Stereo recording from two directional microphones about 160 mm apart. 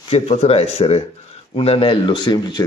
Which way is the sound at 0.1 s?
40° left (ahead or behind).